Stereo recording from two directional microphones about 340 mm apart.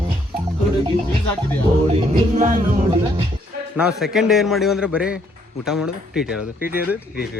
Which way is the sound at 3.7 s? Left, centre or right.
Centre.